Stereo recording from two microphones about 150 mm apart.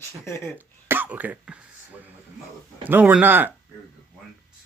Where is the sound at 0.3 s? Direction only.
20° left (ahead or behind).